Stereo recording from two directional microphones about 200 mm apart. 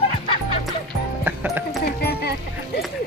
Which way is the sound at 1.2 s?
10° right (ahead or behind).